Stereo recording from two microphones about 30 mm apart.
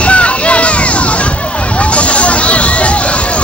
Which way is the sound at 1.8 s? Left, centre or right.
Left.